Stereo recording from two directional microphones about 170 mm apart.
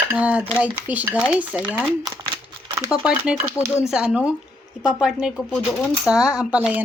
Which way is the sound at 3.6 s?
15° left (ahead or behind).